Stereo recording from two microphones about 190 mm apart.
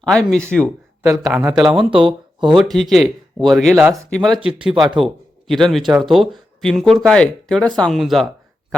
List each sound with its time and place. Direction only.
0.0 s speech: 5° left (ahead or behind)
0.6 s speech: 15° right (ahead or behind)
1.7 s speech: 25° right (ahead or behind)
2.7 s speech: centre (ahead or behind)
4.4 s speech: 25° right (ahead or behind)
4.9 s speech: centre (ahead or behind)